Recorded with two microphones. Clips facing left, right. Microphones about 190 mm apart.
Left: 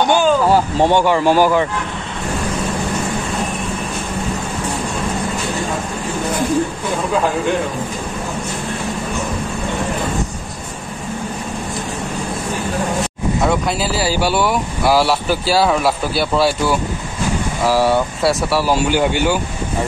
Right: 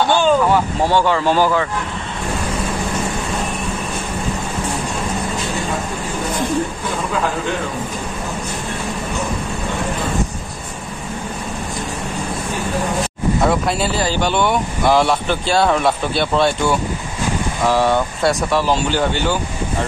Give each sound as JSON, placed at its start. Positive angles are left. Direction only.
{"t": 0.0, "sound": "a sound", "side_deg": 15}
{"t": 0.5, "sound": "speech", "side_deg": 35}
{"t": 0.8, "sound": "speech", "side_deg": 15}
{"t": 13.5, "sound": "speech", "side_deg": 0}